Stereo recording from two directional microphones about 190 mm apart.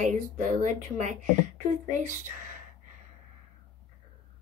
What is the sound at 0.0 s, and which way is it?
Speech, 40° right (ahead or behind).